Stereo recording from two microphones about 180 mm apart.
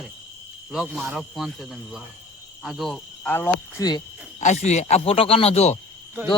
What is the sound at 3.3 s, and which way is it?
Cricket, 10° left (ahead or behind).